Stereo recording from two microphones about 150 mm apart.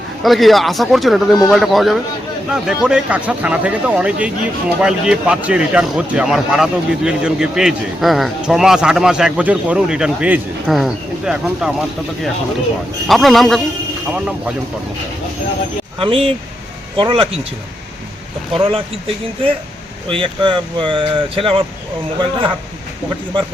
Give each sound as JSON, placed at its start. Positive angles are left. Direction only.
{"t": 0.2, "sound": "speech", "side_deg": 0}
{"t": 16.0, "sound": "speech", "side_deg": -40}
{"t": 18.5, "sound": "speech", "side_deg": -35}
{"t": 20.1, "sound": "speech", "side_deg": -35}